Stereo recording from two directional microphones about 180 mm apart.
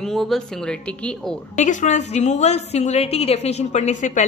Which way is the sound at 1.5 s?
45° left (ahead or behind).